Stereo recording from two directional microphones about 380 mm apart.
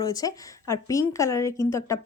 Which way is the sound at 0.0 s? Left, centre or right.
Centre.